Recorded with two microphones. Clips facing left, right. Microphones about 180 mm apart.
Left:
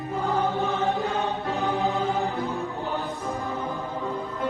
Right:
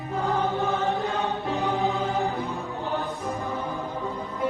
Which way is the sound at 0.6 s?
Centre (ahead or behind).